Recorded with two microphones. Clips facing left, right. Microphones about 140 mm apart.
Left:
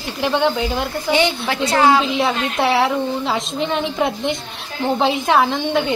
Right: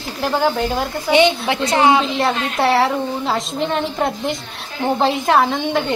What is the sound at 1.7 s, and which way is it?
Speech, 20° right (ahead or behind).